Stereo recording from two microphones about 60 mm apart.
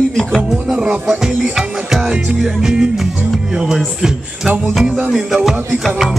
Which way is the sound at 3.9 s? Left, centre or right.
Centre.